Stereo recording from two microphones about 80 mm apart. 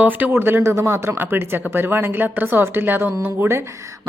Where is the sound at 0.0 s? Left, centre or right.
Right.